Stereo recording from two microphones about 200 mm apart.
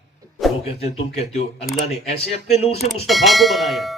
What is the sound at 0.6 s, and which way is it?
A man's voice, 30° left (ahead or behind).